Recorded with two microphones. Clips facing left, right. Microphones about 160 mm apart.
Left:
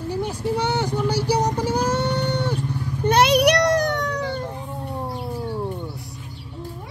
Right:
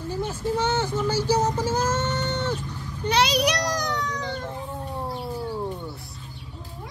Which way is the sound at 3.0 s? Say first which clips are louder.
Left 5 dB; 55° left (ahead or behind).